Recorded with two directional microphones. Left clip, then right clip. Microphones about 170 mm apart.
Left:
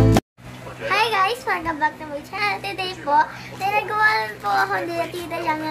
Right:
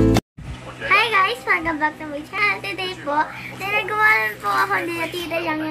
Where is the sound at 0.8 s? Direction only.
20° left (ahead or behind).